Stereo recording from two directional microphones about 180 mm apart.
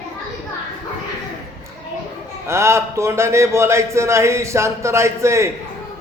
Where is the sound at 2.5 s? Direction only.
15° right (ahead or behind).